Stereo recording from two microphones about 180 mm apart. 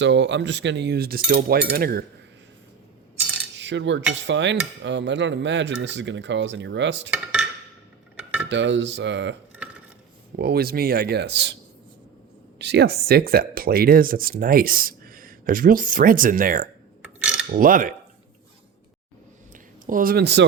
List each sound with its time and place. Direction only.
0.0 s speech: 80° right; by 2.0 s 55° right (ahead or behind)
3.6 s cutlery: 85° right
8.4 s cutlery: 80° right
10.3 s speech: 60° right (ahead or behind)
12.5 s speech: 70° right (ahead or behind); by 16.6 s 50° right (ahead or behind)
17.0 s a sound: 5° right (ahead or behind)
17.5 s speech: 50° right (ahead or behind)
19.5 s a sound: 50° right (ahead or behind); by 20.4 s 65° right (ahead or behind)